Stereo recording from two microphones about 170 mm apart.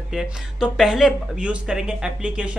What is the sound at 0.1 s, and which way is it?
Speech, 5° right (ahead or behind).